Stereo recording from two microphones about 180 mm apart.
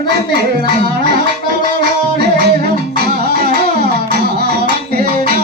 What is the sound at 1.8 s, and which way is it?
Music, 65° right (ahead or behind).